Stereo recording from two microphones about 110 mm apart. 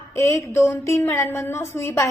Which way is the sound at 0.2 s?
25° left (ahead or behind).